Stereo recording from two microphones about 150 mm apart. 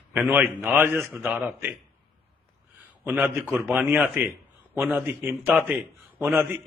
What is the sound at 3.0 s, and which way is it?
Speech, 10° right (ahead or behind).